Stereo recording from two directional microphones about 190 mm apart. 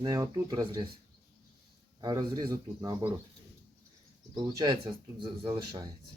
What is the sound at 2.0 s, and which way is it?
Speech, 20° right (ahead or behind).